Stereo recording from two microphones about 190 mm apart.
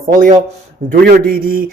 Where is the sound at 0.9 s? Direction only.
50° right (ahead or behind).